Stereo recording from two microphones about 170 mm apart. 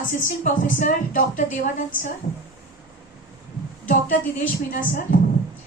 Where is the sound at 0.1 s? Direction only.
45° left (ahead or behind).